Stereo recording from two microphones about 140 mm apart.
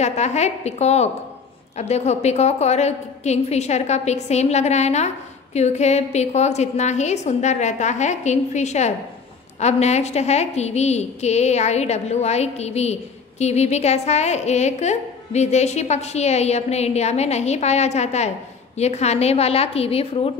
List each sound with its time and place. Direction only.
0.0 s a woman's voice: 55° left (ahead or behind)